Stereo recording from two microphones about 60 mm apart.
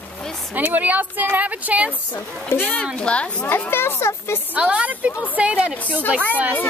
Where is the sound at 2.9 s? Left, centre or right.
Centre.